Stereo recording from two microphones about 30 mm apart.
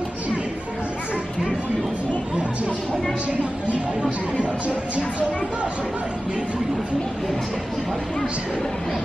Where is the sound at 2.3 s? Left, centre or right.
Right.